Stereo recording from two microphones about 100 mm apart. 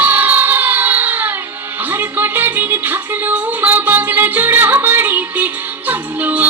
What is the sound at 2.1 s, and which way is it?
Music, 20° right (ahead or behind).